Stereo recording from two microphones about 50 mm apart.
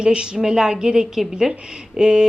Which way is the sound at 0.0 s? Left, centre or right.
Centre.